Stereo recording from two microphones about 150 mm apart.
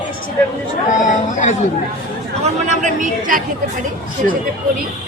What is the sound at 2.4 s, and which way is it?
Speech, 55° right (ahead or behind).